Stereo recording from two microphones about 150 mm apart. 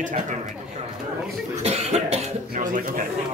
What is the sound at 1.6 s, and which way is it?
Cough, 45° right (ahead or behind).